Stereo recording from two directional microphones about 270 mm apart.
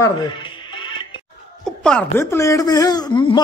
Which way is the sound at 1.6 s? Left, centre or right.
Centre.